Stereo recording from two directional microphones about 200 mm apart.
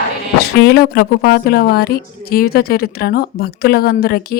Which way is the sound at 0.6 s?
50° left (ahead or behind).